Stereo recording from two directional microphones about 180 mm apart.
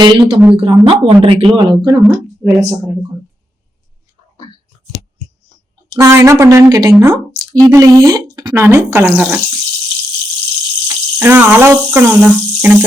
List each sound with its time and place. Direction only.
0.0 s speech: 25° right (ahead or behind)
2.4 s speech: 10° right (ahead or behind)
6.0 s speech: 15° right (ahead or behind)
10.8 s speech: 10° right (ahead or behind)